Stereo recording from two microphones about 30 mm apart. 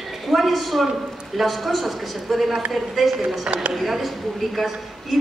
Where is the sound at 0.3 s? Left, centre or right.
Centre.